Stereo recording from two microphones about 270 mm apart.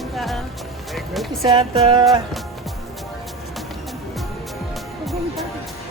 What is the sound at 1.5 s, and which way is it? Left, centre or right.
Music, centre.